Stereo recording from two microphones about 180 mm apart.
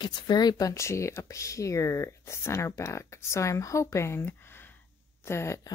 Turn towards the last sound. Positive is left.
turn(degrees=15)  # may be behind; listen again after turning